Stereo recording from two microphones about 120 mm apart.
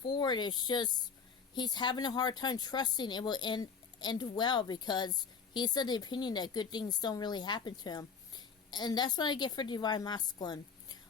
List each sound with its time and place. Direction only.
0.0 s speech: 40° left (ahead or behind)